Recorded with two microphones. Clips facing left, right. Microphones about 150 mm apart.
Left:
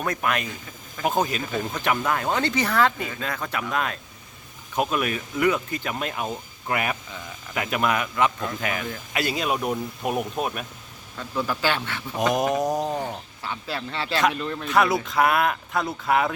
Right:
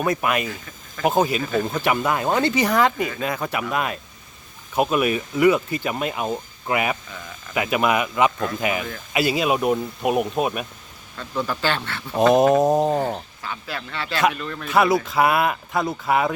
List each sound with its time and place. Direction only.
0.0 s speech: 10° right (ahead or behind)
11.2 s speech: 5° left (ahead or behind)
12.3 s mantra: 25° right (ahead or behind)
13.4 s speech: 30° left (ahead or behind)
14.7 s speech: centre (ahead or behind)